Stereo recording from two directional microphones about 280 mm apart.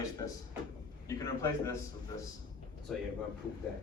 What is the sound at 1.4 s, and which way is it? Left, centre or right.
Speech, centre.